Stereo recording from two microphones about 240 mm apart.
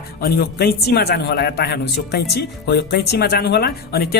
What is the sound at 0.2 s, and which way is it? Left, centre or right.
Speech, left.